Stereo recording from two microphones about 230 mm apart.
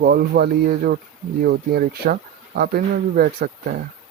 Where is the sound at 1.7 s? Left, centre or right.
Right.